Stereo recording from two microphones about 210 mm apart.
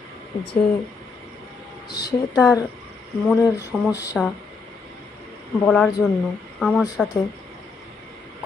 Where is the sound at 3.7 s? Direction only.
Centre (ahead or behind).